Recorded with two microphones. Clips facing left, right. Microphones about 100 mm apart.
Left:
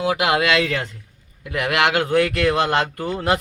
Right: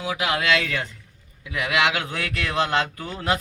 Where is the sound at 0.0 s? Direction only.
65° left (ahead or behind).